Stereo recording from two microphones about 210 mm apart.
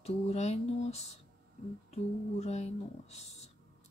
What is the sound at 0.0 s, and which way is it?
Speech, 30° left (ahead or behind).